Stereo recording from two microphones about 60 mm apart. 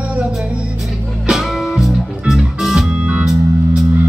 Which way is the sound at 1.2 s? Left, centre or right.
Centre.